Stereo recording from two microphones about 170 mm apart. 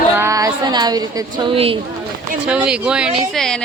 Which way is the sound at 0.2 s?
20° right (ahead or behind).